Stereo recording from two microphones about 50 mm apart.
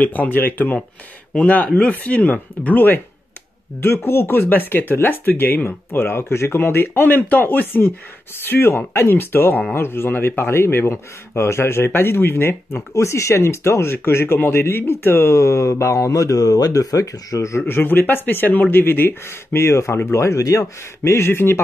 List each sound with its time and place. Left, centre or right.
0.0 s speech: left
1.3 s speech: left
3.8 s speech: left
15.3 s mantra: left
17.6 s speech: left
19.5 s speech: left